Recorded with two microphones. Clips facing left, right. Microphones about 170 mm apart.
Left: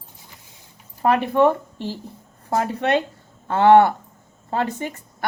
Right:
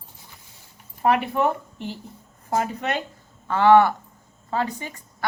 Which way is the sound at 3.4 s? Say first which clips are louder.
Left 2 dB; 25° left (ahead or behind).